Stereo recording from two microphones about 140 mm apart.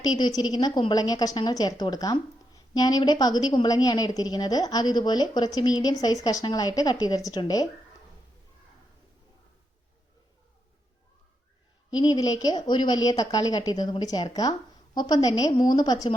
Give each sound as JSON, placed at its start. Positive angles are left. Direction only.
{"t": 0.0, "sound": "a woman's voice", "side_deg": 30}
{"t": 11.9, "sound": "a woman's voice", "side_deg": 30}